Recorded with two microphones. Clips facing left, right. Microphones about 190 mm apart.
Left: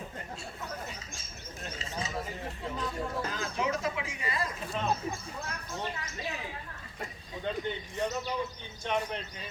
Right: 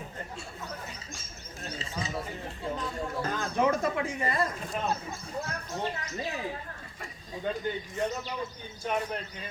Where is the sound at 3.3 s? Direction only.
55° right (ahead or behind).